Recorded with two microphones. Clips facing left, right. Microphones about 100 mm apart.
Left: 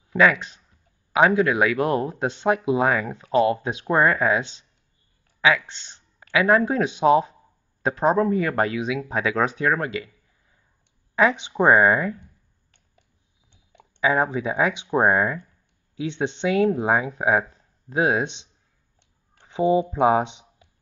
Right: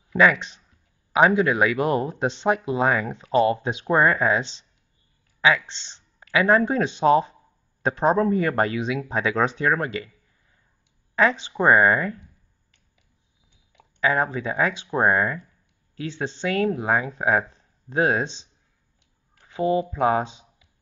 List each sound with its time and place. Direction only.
0.2 s speech: centre (ahead or behind)
2.6 s speech: 15° left (ahead or behind)
2.9 s speech: centre (ahead or behind)
14.0 s speech: 10° left (ahead or behind)
19.3 s speech: 20° left (ahead or behind)